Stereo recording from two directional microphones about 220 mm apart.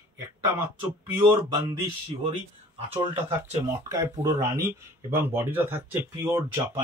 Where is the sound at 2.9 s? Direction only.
25° right (ahead or behind).